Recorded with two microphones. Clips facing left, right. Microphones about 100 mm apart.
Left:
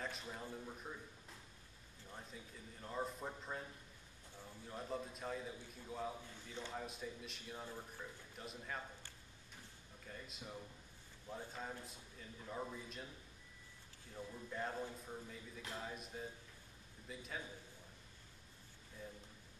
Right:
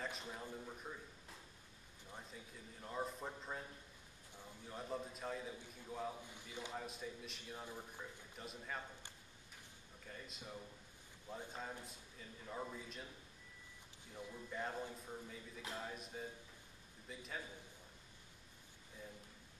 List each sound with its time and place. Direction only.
0.3 s a man's voice: centre (ahead or behind)
2.1 s a man's voice: centre (ahead or behind)
4.6 s a man's voice: centre (ahead or behind)
6.2 s a man's voice: 15° right (ahead or behind)
6.7 s a man's voice: centre (ahead or behind)
10.0 s a man's voice: centre (ahead or behind)
14.3 s a man's voice: centre (ahead or behind)